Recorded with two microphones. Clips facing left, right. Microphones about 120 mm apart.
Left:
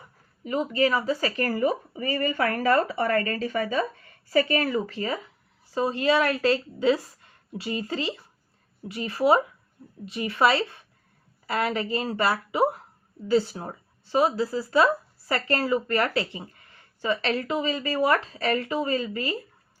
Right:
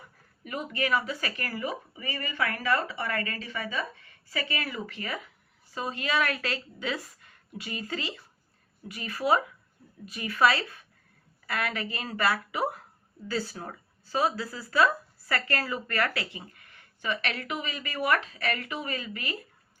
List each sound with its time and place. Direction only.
0.4 s speech: 25° left (ahead or behind)